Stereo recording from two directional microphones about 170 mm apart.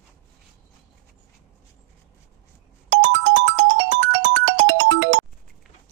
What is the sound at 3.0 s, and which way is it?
Music, 90° right.